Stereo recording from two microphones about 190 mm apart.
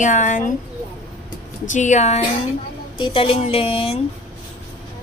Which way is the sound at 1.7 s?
40° left (ahead or behind).